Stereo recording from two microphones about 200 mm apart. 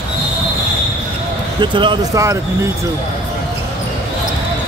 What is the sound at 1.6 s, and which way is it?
Speech, 25° right (ahead or behind).